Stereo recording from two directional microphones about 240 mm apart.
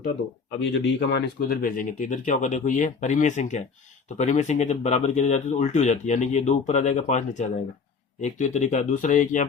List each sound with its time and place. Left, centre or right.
0.7 s speech: left